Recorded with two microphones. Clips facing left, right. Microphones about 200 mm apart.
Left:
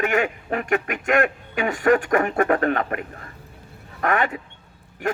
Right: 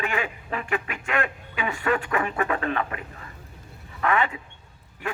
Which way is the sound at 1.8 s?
50° left (ahead or behind).